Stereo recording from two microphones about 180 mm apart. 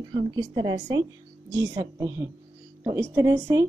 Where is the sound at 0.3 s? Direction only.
20° right (ahead or behind).